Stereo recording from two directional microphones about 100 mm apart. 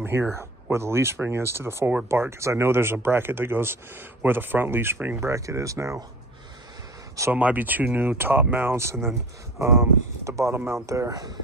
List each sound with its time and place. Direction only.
0.3 s speech: 25° right (ahead or behind)
5.3 s speech: 30° right (ahead or behind)
7.3 s speech: 15° right (ahead or behind); by 11.3 s 40° right (ahead or behind)